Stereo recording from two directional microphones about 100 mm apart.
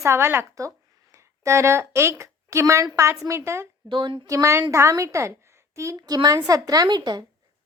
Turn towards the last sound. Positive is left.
turn(degrees=-45)  # may be behind; listen again after turning